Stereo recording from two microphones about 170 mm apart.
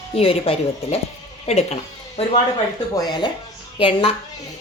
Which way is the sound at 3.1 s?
25° left (ahead or behind).